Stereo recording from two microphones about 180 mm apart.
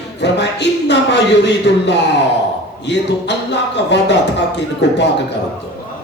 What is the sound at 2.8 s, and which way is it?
A man's voice, 75° left (ahead or behind).